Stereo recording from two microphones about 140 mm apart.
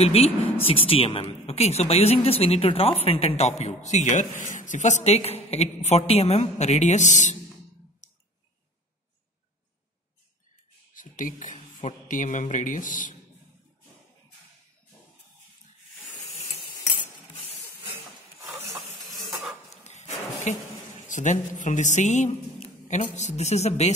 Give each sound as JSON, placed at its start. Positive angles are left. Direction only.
{"t": 0.0, "sound": "speech", "side_deg": 45}
{"t": 8.0, "sound": "clicking", "side_deg": 65}
{"t": 10.9, "sound": "speech", "side_deg": 70}
{"t": 18.7, "sound": "a sound", "side_deg": 0}
{"t": 19.7, "sound": "a sound", "side_deg": 55}
{"t": 21.1, "sound": "speech", "side_deg": 60}